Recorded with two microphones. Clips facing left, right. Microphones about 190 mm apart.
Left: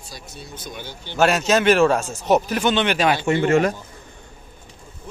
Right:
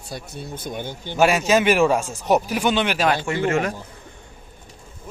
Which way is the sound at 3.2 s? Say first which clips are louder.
Left 4 dB; 30° left (ahead or behind).